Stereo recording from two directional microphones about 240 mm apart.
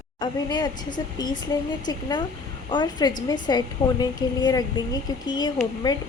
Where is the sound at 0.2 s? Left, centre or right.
Centre.